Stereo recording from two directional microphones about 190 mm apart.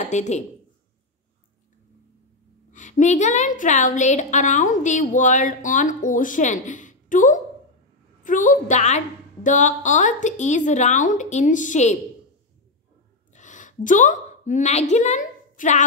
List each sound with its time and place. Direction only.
0.1 s a woman's voice: 35° left (ahead or behind)
2.7 s a woman's voice: 40° left (ahead or behind)
13.3 s a sound: 40° left (ahead or behind)